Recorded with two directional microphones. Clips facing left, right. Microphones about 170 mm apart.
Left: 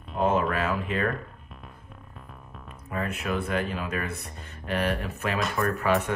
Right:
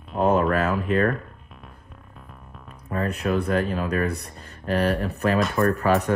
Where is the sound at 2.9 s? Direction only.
40° right (ahead or behind).